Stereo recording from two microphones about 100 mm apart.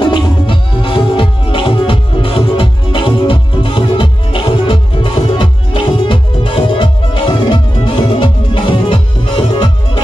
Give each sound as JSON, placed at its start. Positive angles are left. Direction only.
{"t": 0.0, "sound": "music", "side_deg": 55}